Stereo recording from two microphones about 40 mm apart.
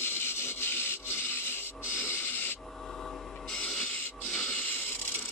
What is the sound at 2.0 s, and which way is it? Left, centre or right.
Owl, left.